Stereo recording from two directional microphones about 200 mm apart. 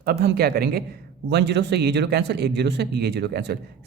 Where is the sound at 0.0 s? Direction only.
50° right (ahead or behind).